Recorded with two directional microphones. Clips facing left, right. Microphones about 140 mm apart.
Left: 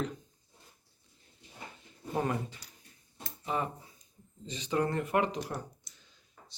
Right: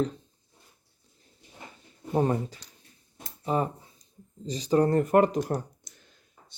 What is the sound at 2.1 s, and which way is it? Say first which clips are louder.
Speech: right 7 dB; 35° right (ahead or behind).